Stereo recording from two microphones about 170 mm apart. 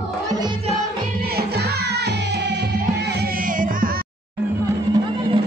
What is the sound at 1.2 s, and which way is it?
Music, 70° right (ahead or behind).